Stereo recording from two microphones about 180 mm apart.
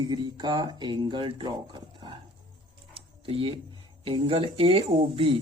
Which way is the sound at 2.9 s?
30° right (ahead or behind).